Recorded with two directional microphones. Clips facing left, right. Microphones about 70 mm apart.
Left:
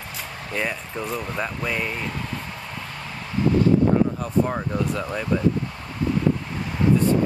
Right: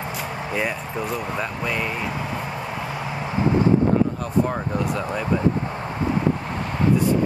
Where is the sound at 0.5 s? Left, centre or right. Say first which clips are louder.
Even; centre.